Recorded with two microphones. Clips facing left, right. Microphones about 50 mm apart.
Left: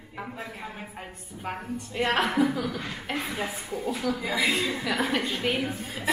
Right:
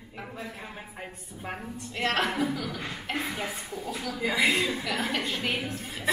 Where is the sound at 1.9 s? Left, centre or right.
Centre.